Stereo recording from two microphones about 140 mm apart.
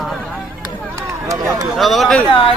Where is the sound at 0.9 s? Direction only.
20° right (ahead or behind).